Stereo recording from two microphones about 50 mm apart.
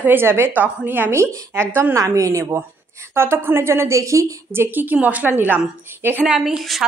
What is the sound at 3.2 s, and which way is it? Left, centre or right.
A woman's voice, right.